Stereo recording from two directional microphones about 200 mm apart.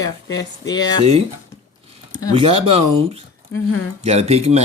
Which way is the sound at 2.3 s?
30° right (ahead or behind).